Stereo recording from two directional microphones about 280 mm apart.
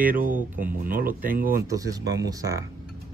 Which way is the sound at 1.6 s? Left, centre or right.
Centre.